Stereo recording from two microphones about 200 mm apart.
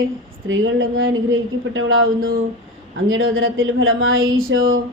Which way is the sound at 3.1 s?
80° right.